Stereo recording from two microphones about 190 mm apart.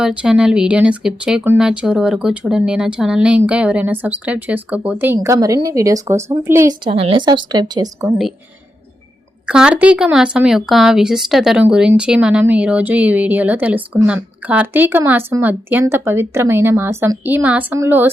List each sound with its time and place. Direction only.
0.0 s speech: 5° right (ahead or behind)
6.8 s speech: 30° right (ahead or behind)
9.5 s speech: 5° right (ahead or behind)